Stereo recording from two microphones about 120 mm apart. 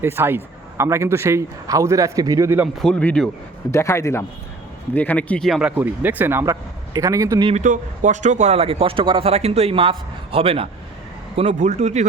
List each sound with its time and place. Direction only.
0.0 s a man's voice: 20° right (ahead or behind)
2.7 s speech: 5° left (ahead or behind)
3.7 s speech: 25° left (ahead or behind)
4.9 s speech: 10° left (ahead or behind)
5.5 s a man's voice: 5° right (ahead or behind); by 7.4 s 25° right (ahead or behind)
7.5 s speech: 90° right; by 10.7 s 50° right (ahead or behind)
11.3 s a man's voice: 65° right (ahead or behind)